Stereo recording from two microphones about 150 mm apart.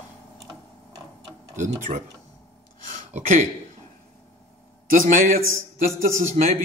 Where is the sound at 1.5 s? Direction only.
55° right (ahead or behind).